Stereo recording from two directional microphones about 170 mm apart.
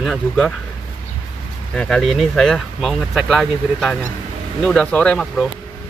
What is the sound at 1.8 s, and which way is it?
Speech, 5° left (ahead or behind).